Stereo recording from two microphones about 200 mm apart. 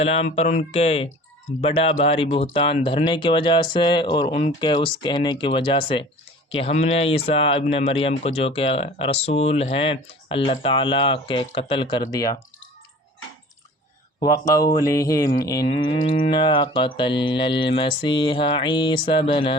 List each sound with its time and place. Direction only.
0.2 s speech: 35° left (ahead or behind)
1.6 s mantra: 30° left (ahead or behind)
12.1 s a sound: 15° left (ahead or behind)
14.2 s mantra: 20° left (ahead or behind)
14.7 s a sound: 15° left (ahead or behind)
15.6 s mantra: 30° left (ahead or behind)